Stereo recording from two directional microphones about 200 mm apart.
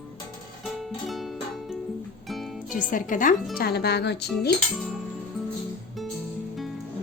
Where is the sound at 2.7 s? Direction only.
40° left (ahead or behind).